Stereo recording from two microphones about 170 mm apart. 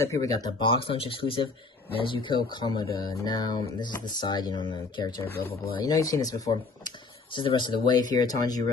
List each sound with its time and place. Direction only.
0.0 s speech: 20° left (ahead or behind)